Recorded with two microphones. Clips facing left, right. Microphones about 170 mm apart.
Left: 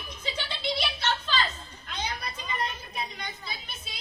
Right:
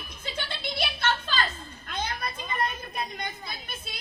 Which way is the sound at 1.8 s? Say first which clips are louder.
Right 2 dB; 50° right (ahead or behind).